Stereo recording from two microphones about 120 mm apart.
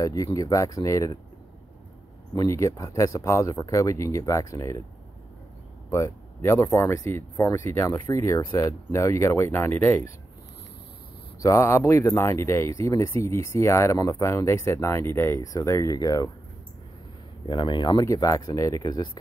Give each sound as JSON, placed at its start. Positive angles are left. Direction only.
{"t": 0.0, "sound": "speech", "side_deg": 30}
{"t": 2.3, "sound": "speech", "side_deg": 25}
{"t": 5.9, "sound": "speech", "side_deg": 25}
{"t": 11.4, "sound": "speech", "side_deg": 20}
{"t": 17.5, "sound": "speech", "side_deg": 40}
{"t": 18.0, "sound": "speech", "side_deg": 25}